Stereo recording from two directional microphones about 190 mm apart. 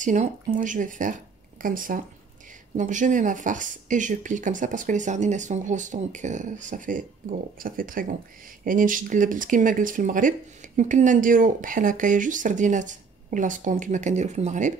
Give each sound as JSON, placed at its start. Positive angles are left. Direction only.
{"t": 0.0, "sound": "speech", "side_deg": -40}